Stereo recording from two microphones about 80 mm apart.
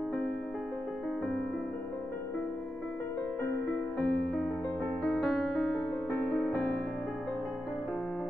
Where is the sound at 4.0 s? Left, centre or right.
Centre.